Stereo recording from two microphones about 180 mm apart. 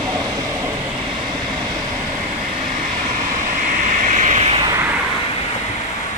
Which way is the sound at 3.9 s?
45° right (ahead or behind).